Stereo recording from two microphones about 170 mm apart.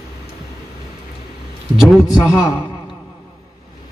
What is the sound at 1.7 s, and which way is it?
Speech, centre (ahead or behind).